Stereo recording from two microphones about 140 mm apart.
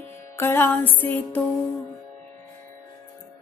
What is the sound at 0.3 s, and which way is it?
A woman's voice, 20° left (ahead or behind).